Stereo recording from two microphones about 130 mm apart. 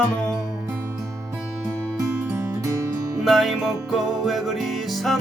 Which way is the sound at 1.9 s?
20° right (ahead or behind).